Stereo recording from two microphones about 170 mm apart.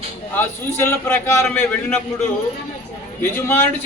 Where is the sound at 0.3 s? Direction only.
15° left (ahead or behind).